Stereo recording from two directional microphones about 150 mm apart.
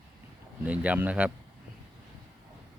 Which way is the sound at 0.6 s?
10° right (ahead or behind).